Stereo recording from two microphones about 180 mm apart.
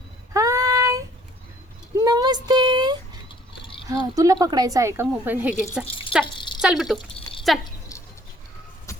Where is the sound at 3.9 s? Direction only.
20° right (ahead or behind).